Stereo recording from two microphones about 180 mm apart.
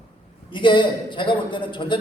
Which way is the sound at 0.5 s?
25° left (ahead or behind).